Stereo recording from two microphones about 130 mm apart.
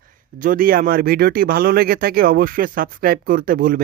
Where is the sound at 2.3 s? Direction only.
90° right.